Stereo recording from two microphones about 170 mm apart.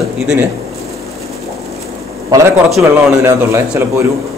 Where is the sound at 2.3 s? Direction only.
15° right (ahead or behind).